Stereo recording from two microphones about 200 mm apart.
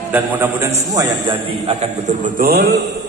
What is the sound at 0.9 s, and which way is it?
A man's voice, 25° right (ahead or behind).